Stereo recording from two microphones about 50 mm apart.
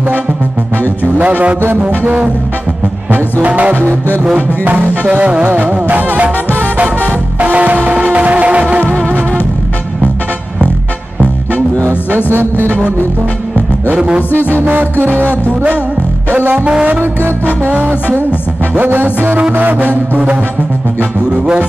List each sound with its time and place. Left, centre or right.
1.1 s a man's voice: right
3.4 s a man's voice: right
5.2 s a man's voice: right
5.6 s music: right
7.3 s music: right
13.9 s a man's voice: centre
14.5 s music: right
16.5 s a man's voice: right
17.6 s music: right